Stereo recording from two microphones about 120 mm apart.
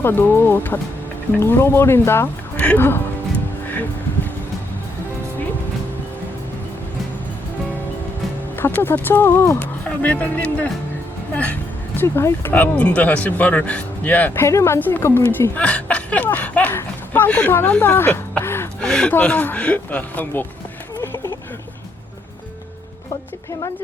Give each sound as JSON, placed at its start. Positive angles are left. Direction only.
{"t": 0.0, "sound": "speech", "side_deg": 15}
{"t": 3.7, "sound": "music", "side_deg": 15}
{"t": 8.5, "sound": "speech", "side_deg": 15}
{"t": 11.9, "sound": "speech", "side_deg": 20}
{"t": 18.8, "sound": "speech", "side_deg": 10}